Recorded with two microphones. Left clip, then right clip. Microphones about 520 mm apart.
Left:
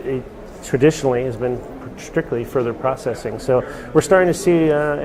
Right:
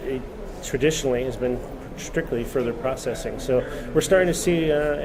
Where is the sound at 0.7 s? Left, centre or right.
Left.